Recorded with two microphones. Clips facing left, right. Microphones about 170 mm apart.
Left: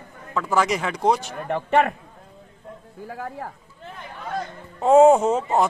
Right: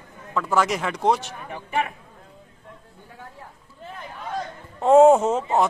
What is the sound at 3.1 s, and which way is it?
Speech, 80° left.